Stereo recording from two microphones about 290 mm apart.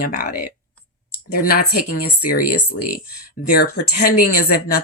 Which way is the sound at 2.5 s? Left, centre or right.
Left.